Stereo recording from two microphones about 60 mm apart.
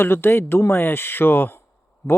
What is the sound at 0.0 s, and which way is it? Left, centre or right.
Speech, left.